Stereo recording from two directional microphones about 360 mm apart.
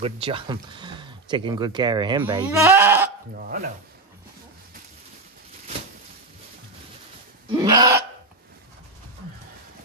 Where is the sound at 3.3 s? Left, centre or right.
Right.